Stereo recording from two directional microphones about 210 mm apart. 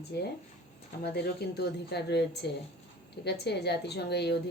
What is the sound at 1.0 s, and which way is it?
Speech, 50° left (ahead or behind).